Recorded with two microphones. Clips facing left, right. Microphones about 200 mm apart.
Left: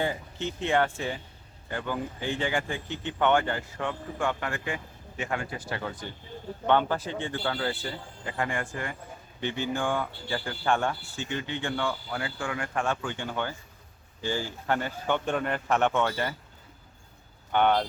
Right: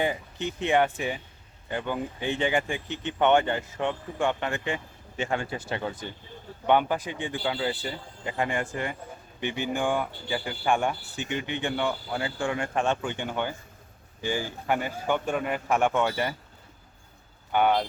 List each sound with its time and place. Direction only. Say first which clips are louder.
0.0 s speech: right 2 dB; 15° right (ahead or behind)
17.5 s speech: even; 5° right (ahead or behind)